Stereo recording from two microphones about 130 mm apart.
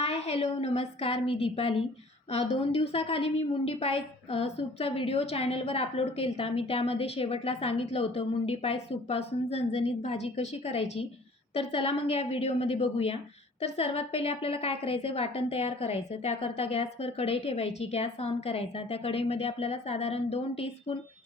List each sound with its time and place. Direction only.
0.0 s a woman's voice: 50° left (ahead or behind)